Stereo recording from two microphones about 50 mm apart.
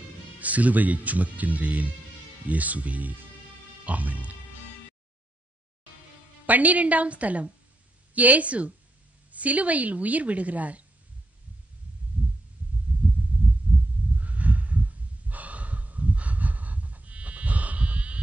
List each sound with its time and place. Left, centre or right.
0.4 s a woman's voice: right
6.4 s a woman's voice: right
12.2 s heart sounds: right
13.3 s heart sounds: right
14.1 s snort: right